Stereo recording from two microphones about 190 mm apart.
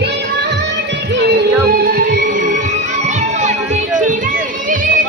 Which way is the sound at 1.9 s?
50° right (ahead or behind).